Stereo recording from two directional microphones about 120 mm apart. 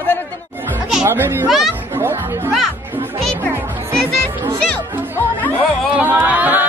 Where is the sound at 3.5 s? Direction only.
15° right (ahead or behind).